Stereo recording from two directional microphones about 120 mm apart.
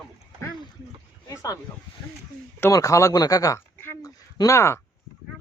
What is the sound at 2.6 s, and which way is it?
Speech, 25° left (ahead or behind).